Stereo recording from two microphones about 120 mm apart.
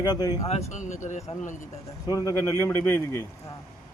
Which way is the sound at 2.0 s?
30° left (ahead or behind).